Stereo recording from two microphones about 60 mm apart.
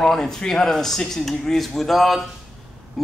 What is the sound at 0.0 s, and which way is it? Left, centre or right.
A man's voice, centre.